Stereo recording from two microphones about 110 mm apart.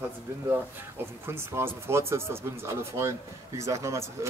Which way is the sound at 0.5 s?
20° right (ahead or behind).